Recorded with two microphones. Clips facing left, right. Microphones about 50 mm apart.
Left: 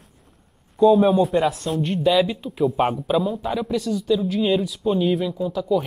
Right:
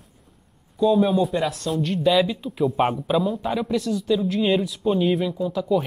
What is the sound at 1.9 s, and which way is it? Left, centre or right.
A man's voice, centre.